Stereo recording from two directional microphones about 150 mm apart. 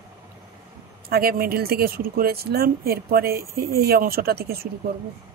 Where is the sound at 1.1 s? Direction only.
90° right.